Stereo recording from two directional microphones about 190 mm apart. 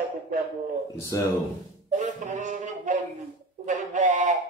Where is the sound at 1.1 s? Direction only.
15° left (ahead or behind).